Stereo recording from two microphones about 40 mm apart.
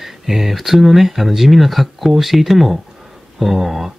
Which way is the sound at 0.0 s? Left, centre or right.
Centre.